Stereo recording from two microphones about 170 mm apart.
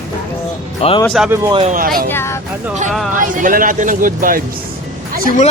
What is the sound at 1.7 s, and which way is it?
Speech, 55° right (ahead or behind).